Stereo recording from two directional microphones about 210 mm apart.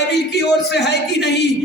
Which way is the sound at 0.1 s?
55° left (ahead or behind).